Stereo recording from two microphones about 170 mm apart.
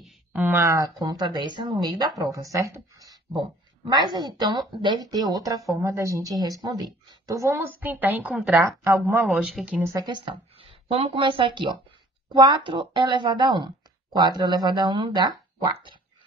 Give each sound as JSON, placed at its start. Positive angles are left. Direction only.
{"t": 0.3, "sound": "a woman's voice", "side_deg": -10}
{"t": 9.9, "sound": "speech", "side_deg": -25}